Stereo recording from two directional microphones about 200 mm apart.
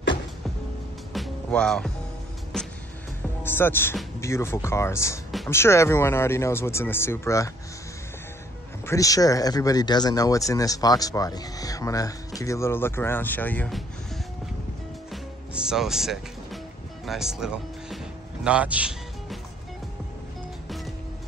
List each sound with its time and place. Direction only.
1.1 s music: centre (ahead or behind)
3.4 s speech: 10° left (ahead or behind)
8.8 s speech: 15° left (ahead or behind)
15.5 s speech: 5° right (ahead or behind)
20.6 s music: centre (ahead or behind)